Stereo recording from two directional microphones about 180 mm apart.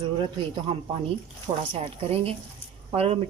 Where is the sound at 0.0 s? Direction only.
30° right (ahead or behind).